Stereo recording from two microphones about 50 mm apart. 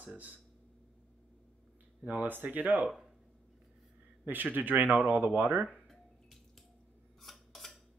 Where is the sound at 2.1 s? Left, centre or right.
Right.